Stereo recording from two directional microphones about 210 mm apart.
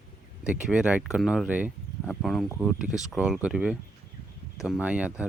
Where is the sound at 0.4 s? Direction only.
5° right (ahead or behind).